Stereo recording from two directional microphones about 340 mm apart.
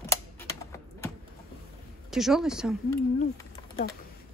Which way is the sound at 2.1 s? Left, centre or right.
Centre.